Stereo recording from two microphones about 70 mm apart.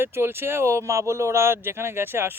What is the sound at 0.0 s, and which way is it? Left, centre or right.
A man's voice, right.